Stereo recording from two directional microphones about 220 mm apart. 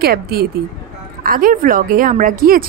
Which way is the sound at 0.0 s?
45° right (ahead or behind).